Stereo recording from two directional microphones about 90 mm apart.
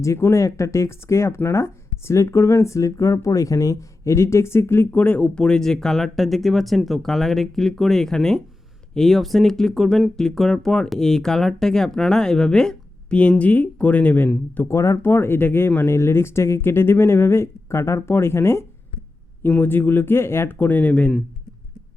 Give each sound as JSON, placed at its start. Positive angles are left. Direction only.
{"t": 0.0, "sound": "speech", "side_deg": 30}
{"t": 14.7, "sound": "speech", "side_deg": 35}